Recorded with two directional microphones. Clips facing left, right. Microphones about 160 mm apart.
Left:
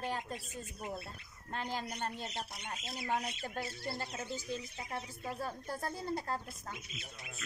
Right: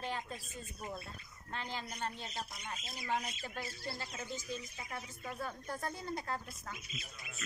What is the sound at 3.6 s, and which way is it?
Speech, 25° left (ahead or behind).